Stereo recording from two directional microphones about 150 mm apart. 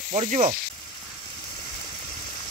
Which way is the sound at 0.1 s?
50° right (ahead or behind).